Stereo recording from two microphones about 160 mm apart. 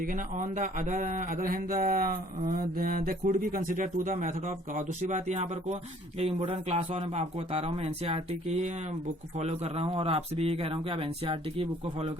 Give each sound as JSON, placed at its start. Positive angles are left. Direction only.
{"t": 0.0, "sound": "speech", "side_deg": -55}